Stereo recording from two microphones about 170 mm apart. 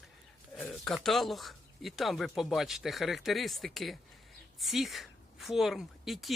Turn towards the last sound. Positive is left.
turn(degrees=0)  # may be behind; listen again after turning